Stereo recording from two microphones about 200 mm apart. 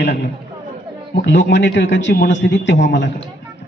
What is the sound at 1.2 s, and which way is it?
A man's voice, 60° left (ahead or behind).